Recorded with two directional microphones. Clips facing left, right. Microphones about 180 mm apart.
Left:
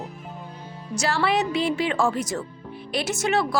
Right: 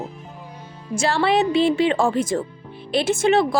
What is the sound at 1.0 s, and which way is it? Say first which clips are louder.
Speech: right 4 dB; 30° right (ahead or behind).